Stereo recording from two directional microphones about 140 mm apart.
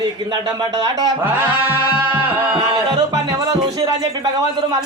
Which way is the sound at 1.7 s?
15° right (ahead or behind).